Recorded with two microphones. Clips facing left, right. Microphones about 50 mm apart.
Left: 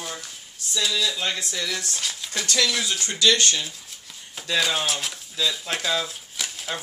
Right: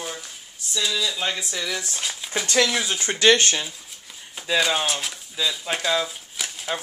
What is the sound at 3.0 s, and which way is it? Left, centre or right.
Speech, right.